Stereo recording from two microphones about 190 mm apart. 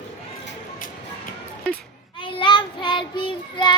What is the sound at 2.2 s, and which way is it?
Child singing, 25° left (ahead or behind).